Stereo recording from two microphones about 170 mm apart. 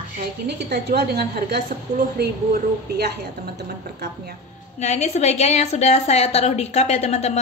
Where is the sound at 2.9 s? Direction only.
70° right (ahead or behind).